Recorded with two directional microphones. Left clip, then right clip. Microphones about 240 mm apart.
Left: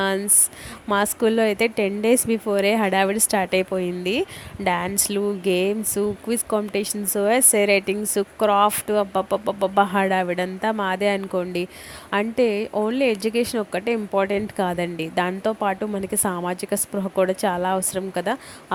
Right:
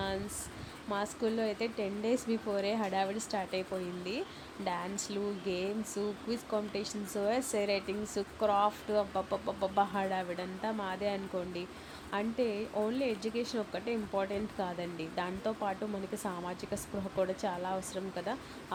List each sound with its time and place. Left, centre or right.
0.9 s speech: left